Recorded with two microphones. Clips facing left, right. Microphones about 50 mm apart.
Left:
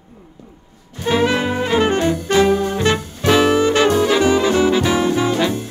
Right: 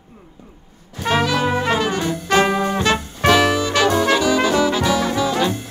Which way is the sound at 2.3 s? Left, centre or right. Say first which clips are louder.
Left 1 dB; right.